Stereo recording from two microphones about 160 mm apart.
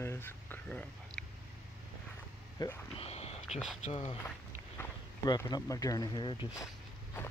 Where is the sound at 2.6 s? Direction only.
25° left (ahead or behind).